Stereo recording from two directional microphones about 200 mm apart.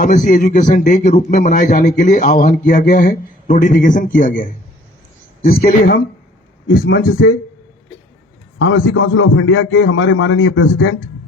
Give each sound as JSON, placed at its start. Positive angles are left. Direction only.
{"t": 0.0, "sound": "a man's voice", "side_deg": 40}
{"t": 6.7, "sound": "a man's voice", "side_deg": 60}
{"t": 8.5, "sound": "a man's voice", "side_deg": 90}